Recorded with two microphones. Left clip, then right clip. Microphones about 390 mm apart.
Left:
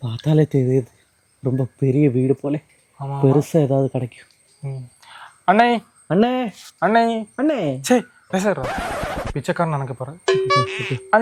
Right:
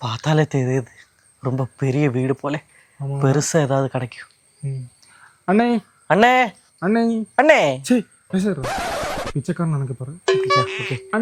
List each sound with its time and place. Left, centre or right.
0.0 s speech: right
5.5 s speech: left
6.1 s speech: right
6.7 s speech: left
7.3 s speech: right
7.9 s speech: left
8.5 s a sound: centre
9.5 s speech: left
10.2 s music: centre